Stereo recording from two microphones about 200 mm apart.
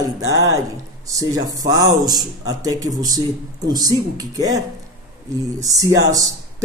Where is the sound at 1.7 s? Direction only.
20° right (ahead or behind).